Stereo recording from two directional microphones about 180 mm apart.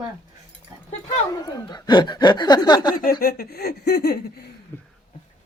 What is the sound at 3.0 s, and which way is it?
Speech, 55° left (ahead or behind).